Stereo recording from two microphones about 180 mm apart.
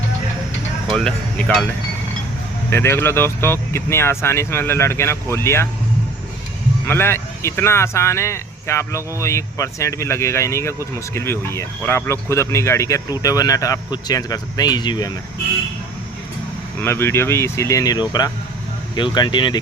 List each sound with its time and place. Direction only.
0.9 s speech: 5° left (ahead or behind)
2.6 s speech: 15° left (ahead or behind)
6.8 s speech: 15° left (ahead or behind)
16.8 s speech: 15° left (ahead or behind)